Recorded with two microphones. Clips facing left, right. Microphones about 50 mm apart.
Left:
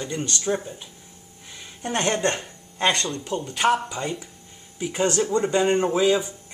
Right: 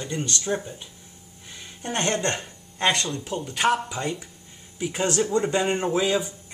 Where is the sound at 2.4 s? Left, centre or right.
Centre.